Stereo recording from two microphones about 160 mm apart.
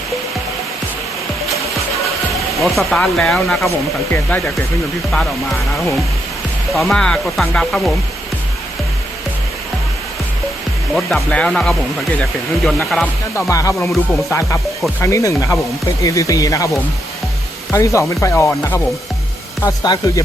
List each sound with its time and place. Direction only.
2.6 s speech: centre (ahead or behind)
6.7 s speech: centre (ahead or behind)
10.9 s speech: 5° left (ahead or behind)
13.5 s speech: 20° left (ahead or behind)
15.0 s speech: 20° left (ahead or behind)